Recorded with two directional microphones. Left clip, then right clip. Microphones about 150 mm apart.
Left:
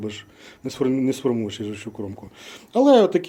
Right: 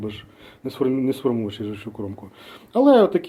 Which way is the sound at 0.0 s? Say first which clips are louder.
Even; 10° left (ahead or behind).